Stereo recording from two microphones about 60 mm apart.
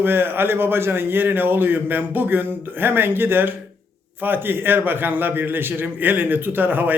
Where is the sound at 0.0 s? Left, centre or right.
Right.